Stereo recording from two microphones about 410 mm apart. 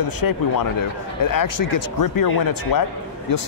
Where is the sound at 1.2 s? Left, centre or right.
Left.